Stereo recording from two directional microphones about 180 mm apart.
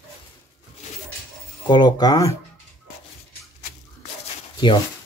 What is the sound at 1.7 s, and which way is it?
Speech, 25° left (ahead or behind).